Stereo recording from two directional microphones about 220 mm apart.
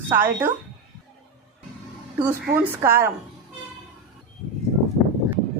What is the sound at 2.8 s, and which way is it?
Speech, 10° right (ahead or behind).